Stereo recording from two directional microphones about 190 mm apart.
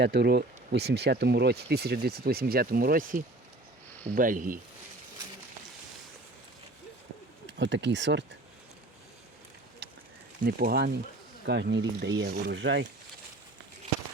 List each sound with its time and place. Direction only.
0.0 s speech: 60° right (ahead or behind)
7.6 s speech: 70° right (ahead or behind)
9.8 s a sound: 60° right (ahead or behind)
10.4 s speech: 50° right (ahead or behind)
11.4 s speech: 65° right (ahead or behind)